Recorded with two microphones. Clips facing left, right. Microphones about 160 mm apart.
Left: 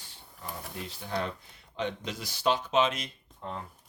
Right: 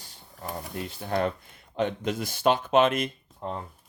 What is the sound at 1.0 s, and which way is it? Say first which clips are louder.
Speech: right 7 dB; 55° right (ahead or behind).